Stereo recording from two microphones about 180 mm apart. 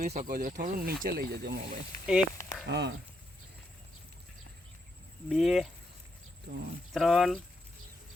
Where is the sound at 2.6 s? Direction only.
70° right (ahead or behind).